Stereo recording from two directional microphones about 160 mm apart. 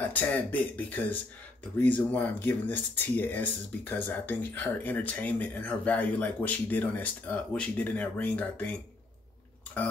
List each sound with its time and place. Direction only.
0.0 s speech: 10° left (ahead or behind)